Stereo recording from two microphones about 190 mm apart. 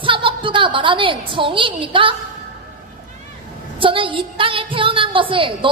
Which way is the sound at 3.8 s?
25° right (ahead or behind).